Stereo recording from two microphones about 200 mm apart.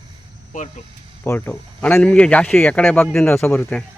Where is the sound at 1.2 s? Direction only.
10° left (ahead or behind).